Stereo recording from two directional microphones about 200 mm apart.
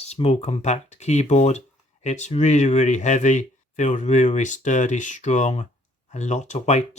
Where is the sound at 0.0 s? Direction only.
30° left (ahead or behind).